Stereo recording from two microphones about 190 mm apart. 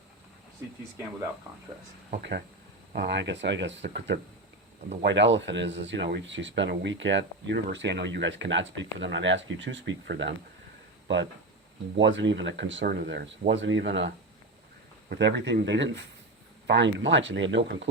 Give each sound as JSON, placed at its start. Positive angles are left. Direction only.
{"t": 2.9, "sound": "speech", "side_deg": -65}
{"t": 11.9, "sound": "speech", "side_deg": -70}
{"t": 15.1, "sound": "speech", "side_deg": -60}